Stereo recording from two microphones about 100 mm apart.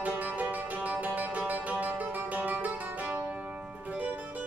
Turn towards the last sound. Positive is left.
turn(degrees=-15)  # may be behind; listen again after turning